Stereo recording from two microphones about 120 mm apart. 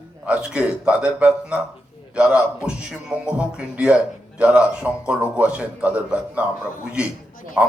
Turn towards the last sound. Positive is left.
turn(degrees=0)  # may be behind; listen again after turning